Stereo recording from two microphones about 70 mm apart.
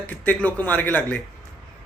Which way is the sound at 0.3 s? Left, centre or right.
Left.